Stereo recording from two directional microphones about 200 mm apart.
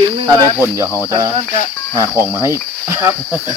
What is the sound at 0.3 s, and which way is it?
Cricket, 15° right (ahead or behind).